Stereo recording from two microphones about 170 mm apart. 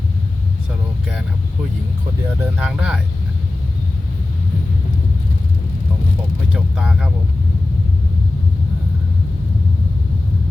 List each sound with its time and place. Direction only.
2.4 s speech: 5° right (ahead or behind)
6.5 s speech: 5° right (ahead or behind)